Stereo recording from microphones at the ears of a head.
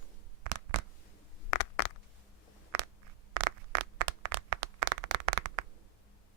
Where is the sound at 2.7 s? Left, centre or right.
Right.